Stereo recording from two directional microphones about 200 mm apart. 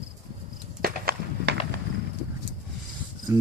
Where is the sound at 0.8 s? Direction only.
50° right (ahead or behind).